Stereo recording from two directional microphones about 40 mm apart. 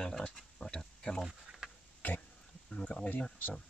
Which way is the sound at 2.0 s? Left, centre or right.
Left.